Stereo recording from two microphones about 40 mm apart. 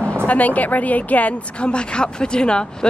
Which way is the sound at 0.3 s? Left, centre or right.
Left.